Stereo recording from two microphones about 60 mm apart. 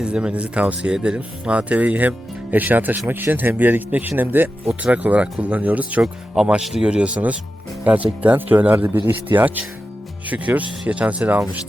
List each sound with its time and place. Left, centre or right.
0.0 s speech: centre
6.0 s speech: centre